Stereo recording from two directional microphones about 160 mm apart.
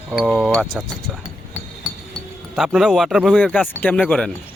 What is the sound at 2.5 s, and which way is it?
Speech, centre (ahead or behind).